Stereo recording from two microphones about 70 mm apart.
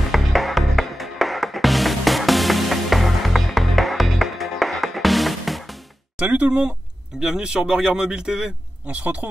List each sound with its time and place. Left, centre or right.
0.1 s music: centre
6.1 s a man's voice: centre
8.8 s speech: centre